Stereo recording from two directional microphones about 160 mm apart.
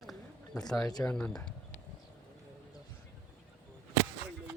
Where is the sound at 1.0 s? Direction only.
5° left (ahead or behind).